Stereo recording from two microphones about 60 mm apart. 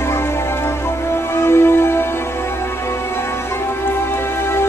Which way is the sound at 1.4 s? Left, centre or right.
Left.